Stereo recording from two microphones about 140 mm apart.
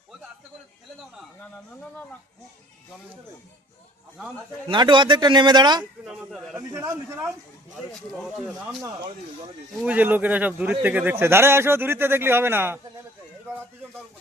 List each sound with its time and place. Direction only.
4.7 s speech: 35° right (ahead or behind)
6.1 s speech: centre (ahead or behind)
6.6 s a man's voice: 20° right (ahead or behind)
8.1 s speech: centre (ahead or behind)
9.8 s speech: 10° right (ahead or behind)